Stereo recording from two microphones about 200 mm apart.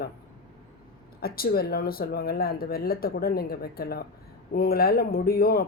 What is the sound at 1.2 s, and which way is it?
Speech, 50° left (ahead or behind).